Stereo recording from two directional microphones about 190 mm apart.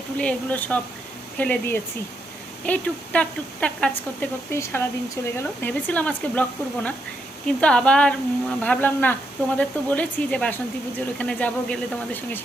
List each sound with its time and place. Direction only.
0.2 s speech: 5° left (ahead or behind)
7.4 s speech: 5° left (ahead or behind)